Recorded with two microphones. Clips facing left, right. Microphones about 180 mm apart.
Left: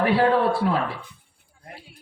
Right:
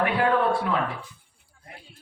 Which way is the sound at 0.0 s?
35° left (ahead or behind).